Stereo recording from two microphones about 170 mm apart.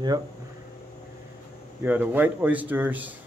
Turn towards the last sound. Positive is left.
turn(degrees=-10)  # may be behind; listen again after turning